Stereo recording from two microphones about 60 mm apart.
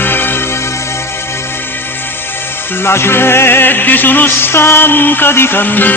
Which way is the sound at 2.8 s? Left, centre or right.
Left.